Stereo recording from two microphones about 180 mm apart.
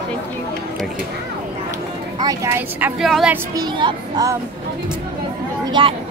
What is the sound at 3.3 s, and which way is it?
Speech, 20° right (ahead or behind).